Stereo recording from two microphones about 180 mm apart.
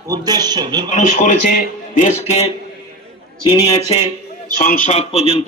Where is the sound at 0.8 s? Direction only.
40° left (ahead or behind).